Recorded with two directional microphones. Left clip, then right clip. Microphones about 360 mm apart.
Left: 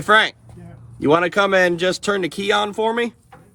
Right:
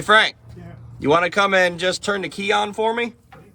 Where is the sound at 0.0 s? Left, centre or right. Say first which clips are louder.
Even; centre.